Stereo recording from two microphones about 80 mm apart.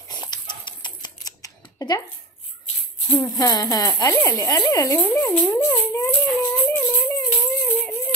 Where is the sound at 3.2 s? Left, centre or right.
Left.